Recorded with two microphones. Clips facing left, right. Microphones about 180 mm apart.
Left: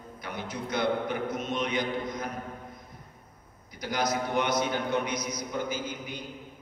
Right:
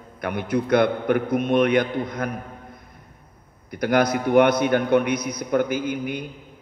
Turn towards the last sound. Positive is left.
turn(degrees=-60)  # may be behind; listen again after turning